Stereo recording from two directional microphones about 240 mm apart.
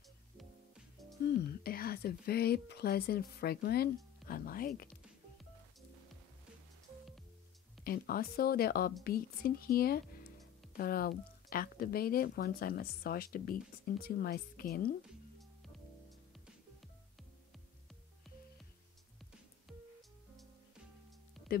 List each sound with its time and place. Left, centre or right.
1.5 s speech: left
7.8 s speech: left